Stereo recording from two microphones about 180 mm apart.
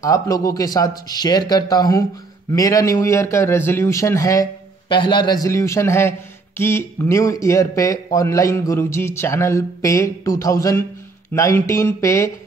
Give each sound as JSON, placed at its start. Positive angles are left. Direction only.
{"t": 0.0, "sound": "a man's voice", "side_deg": 20}